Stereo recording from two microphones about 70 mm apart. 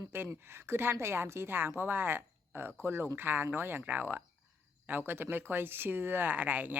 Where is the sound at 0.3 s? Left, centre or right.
Right.